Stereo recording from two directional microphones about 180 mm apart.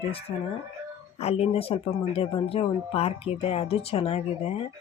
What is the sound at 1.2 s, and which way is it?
Speech, 35° left (ahead or behind).